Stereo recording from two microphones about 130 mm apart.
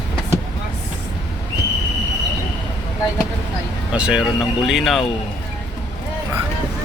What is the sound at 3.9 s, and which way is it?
Speech, 5° right (ahead or behind).